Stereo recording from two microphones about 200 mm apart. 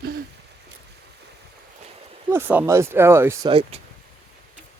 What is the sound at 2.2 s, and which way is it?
Speech, 10° right (ahead or behind).